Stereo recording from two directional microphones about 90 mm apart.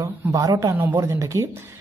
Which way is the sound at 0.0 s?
40° right (ahead or behind).